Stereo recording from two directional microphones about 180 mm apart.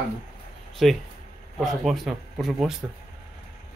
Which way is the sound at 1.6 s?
Centre (ahead or behind).